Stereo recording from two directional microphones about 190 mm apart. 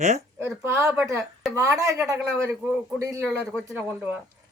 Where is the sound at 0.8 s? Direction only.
Centre (ahead or behind).